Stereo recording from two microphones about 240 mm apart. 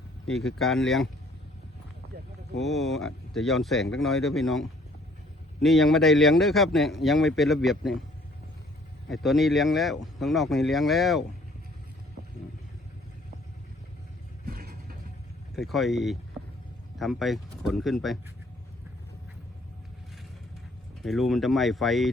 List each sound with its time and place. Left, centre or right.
0.3 s a man's voice: centre
2.6 s a man's voice: centre
5.6 s a man's voice: centre
9.0 s a man's voice: centre
14.4 s vehicle: right
15.5 s a man's voice: centre
21.0 s a man's voice: centre